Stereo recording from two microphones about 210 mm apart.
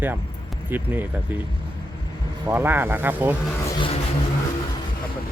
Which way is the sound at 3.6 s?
25° left (ahead or behind).